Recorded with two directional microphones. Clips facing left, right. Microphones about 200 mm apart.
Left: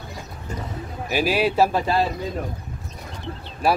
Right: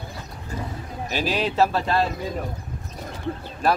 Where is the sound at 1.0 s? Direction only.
10° left (ahead or behind).